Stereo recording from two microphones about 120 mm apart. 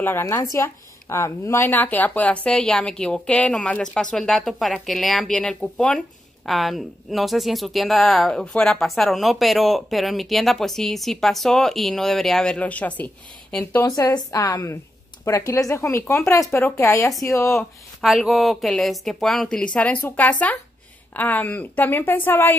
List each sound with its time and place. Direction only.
0.0 s a woman's voice: 20° left (ahead or behind)
13.8 s speech: 30° left (ahead or behind)
17.6 s a woman's voice: centre (ahead or behind); by 22.6 s 15° left (ahead or behind)